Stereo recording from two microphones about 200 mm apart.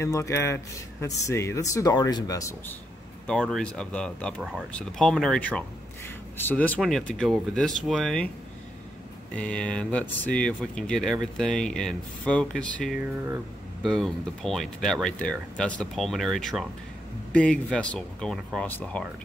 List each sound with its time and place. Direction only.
0.0 s speech: 15° left (ahead or behind)
3.3 s speech: centre (ahead or behind)
9.3 s speech: 5° left (ahead or behind)